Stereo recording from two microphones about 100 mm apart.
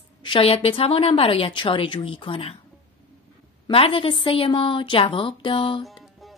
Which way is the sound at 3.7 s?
65° left (ahead or behind).